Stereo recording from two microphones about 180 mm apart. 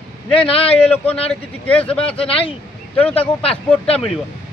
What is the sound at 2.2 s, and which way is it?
Speech, 30° left (ahead or behind).